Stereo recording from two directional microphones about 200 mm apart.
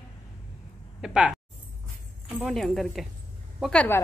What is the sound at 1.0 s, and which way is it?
A man's voice, 5° right (ahead or behind).